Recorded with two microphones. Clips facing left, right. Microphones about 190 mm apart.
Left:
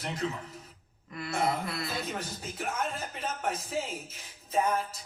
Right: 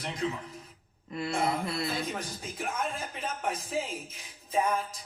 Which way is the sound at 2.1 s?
5° left (ahead or behind).